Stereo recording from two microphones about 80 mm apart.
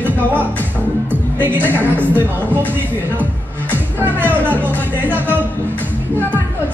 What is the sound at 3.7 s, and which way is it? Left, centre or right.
Music, right.